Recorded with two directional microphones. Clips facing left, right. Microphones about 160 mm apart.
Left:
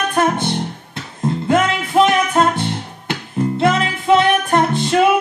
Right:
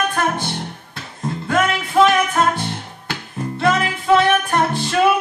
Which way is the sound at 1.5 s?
20° left (ahead or behind).